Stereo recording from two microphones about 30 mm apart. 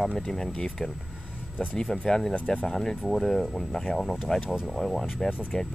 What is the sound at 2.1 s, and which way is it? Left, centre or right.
Speech, centre.